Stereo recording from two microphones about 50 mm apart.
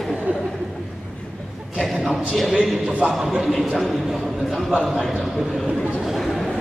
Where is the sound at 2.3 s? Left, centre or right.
Centre.